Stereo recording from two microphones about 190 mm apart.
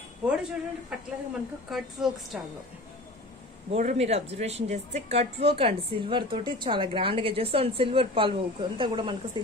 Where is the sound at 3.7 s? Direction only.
35° right (ahead or behind).